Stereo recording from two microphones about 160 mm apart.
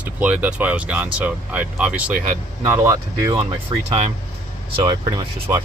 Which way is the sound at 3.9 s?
45° right (ahead or behind).